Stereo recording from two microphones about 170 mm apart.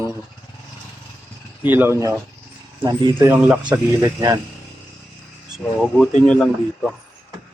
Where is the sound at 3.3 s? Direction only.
10° right (ahead or behind).